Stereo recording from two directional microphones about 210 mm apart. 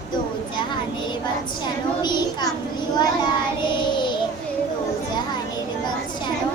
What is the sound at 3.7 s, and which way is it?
Child singing, 20° left (ahead or behind).